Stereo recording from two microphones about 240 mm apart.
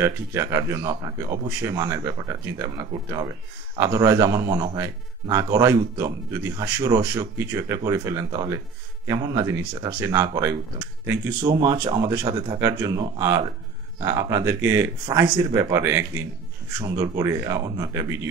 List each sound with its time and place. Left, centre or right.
0.0 s speech: centre
11.6 s speech: centre